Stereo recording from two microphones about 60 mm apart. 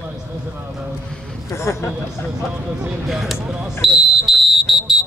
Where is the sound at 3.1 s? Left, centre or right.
Centre.